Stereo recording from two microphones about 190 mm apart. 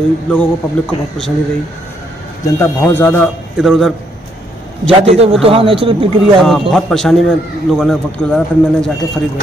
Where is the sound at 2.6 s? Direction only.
10° left (ahead or behind).